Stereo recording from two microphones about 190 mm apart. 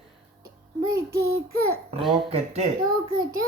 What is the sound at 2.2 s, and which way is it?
Speech, 35° right (ahead or behind).